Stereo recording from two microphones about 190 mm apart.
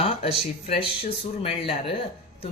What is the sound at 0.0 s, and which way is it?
Speech, 30° left (ahead or behind).